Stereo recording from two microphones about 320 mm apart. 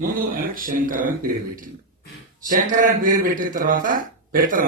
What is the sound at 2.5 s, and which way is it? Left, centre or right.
Speech, right.